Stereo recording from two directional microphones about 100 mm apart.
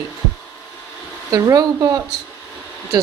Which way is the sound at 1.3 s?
35° right (ahead or behind).